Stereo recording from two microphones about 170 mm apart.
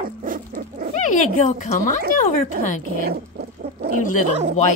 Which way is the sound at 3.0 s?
65° right (ahead or behind).